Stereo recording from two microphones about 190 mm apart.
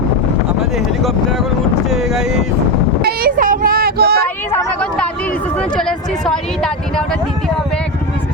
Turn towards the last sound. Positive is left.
turn(degrees=5)  # may be behind; listen again after turning